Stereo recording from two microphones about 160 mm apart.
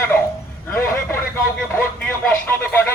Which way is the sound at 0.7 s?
15° left (ahead or behind).